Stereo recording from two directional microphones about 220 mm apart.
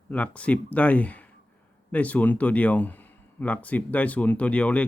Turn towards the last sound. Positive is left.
turn(degrees=5)  # may be behind; listen again after turning